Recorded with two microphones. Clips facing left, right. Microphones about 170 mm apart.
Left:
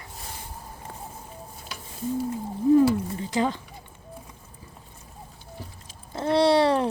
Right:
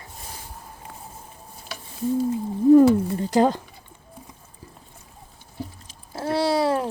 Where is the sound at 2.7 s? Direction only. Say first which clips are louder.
Right 5 dB; 40° right (ahead or behind).